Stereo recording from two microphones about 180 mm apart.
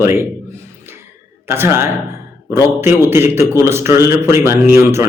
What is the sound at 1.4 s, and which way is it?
A man's voice, 15° right (ahead or behind).